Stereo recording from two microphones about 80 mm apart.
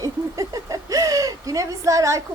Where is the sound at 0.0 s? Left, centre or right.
Right.